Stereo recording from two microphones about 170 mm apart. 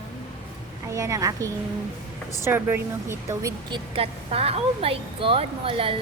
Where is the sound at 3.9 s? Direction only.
35° right (ahead or behind).